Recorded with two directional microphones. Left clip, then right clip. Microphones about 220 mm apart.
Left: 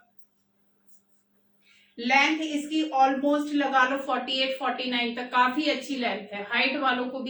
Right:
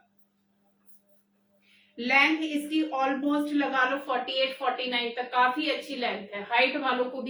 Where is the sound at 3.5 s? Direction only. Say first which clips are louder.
Left 3 dB; 10° left (ahead or behind).